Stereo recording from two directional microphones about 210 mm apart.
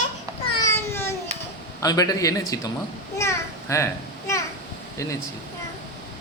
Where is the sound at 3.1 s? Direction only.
15° left (ahead or behind).